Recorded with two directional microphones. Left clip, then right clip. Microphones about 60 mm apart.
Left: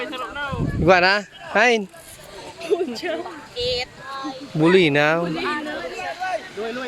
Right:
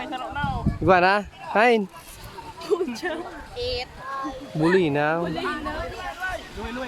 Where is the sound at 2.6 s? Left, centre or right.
Right.